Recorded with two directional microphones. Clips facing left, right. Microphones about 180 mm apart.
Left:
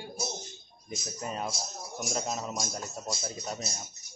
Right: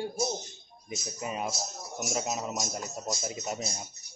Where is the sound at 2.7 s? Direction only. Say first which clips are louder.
Right 2 dB; 20° right (ahead or behind).